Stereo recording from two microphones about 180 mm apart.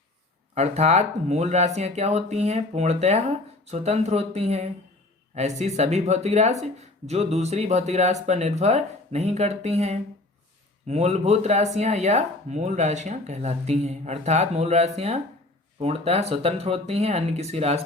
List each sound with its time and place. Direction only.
0.5 s speech: 40° right (ahead or behind)